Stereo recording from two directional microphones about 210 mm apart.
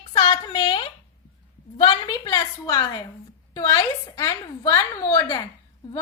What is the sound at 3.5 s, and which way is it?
A woman's voice, 15° left (ahead or behind).